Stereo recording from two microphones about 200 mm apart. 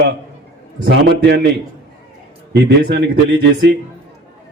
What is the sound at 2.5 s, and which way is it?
A man's voice, 60° right (ahead or behind).